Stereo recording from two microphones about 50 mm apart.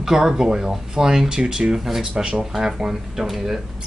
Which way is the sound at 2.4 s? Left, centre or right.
Centre.